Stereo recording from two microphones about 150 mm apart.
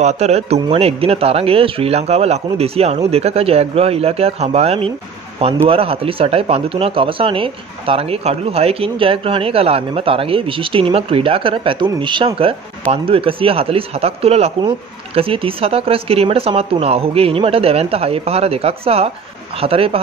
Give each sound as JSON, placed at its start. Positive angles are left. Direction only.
{"t": 0.0, "sound": "speech", "side_deg": -45}